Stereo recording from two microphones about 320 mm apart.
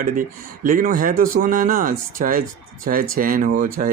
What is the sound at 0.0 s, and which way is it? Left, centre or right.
Speech, right.